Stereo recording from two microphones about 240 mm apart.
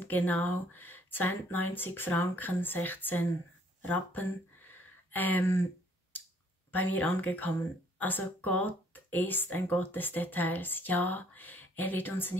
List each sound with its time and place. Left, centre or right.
0.3 s speech: centre
6.7 s speech: centre